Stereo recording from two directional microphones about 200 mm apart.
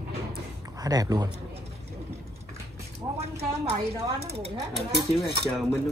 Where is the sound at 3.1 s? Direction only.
30° right (ahead or behind).